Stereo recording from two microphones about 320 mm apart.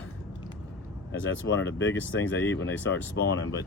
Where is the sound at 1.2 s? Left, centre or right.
Left.